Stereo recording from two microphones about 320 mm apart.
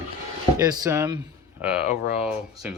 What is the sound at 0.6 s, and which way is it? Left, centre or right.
Speech, centre.